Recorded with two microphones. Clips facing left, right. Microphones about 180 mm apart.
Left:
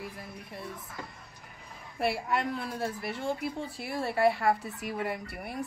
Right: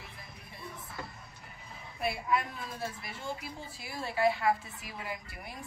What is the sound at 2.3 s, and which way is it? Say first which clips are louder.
A woman's voice: left 2 dB; 70° left (ahead or behind).